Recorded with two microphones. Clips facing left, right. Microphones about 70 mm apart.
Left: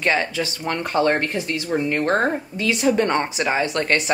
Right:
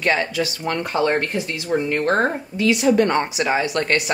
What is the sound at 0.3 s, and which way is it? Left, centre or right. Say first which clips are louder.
Speech: right 2 dB; left.